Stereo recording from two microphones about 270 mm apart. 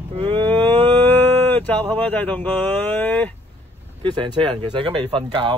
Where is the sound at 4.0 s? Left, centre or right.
Centre.